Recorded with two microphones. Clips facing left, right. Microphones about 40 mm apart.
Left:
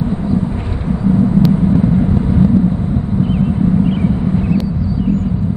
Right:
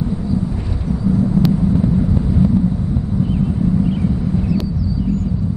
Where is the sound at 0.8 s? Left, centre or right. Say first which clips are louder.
Left 4 dB; left.